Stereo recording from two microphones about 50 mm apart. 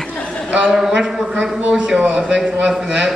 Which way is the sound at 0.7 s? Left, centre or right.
Centre.